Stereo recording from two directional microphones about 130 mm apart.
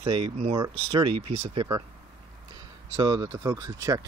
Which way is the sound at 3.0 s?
30° right (ahead or behind).